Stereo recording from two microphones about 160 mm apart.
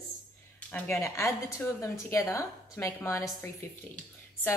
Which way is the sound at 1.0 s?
20° left (ahead or behind).